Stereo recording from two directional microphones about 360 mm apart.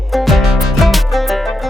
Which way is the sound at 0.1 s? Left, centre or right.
Centre.